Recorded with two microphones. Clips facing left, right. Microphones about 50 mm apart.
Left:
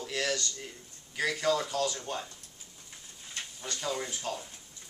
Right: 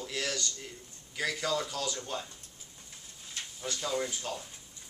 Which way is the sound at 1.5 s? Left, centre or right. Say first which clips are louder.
Left 4 dB; centre.